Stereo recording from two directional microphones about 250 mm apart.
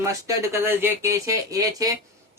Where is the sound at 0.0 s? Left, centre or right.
Centre.